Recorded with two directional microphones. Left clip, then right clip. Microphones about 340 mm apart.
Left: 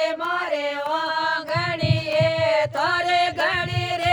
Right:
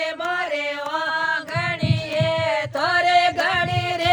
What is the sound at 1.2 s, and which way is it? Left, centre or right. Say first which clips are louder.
Music: even; left.